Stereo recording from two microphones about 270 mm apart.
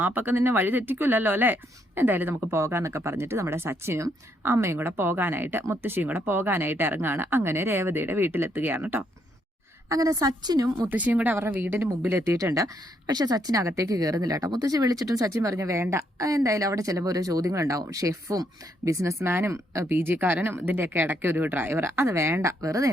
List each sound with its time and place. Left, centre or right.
0.0 s a woman's voice: centre